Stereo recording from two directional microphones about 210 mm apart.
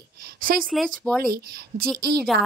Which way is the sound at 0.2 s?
45° right (ahead or behind).